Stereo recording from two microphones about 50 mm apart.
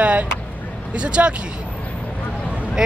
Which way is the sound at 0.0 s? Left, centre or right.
Right.